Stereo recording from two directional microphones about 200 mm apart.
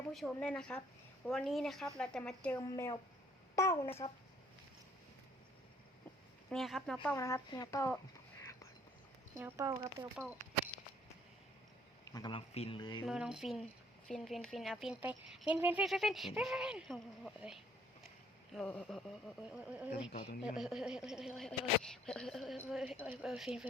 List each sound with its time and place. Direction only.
0.1 s speech: 5° left (ahead or behind)
2.6 s speech: 15° left (ahead or behind)
6.5 s speech: centre (ahead or behind)
7.2 s speech: 15° left (ahead or behind)
8.4 s whispering: 15° left (ahead or behind)
9.4 s speech: 15° right (ahead or behind)
12.0 s speech: 20° left (ahead or behind)
13.1 s speech: 5° right (ahead or behind)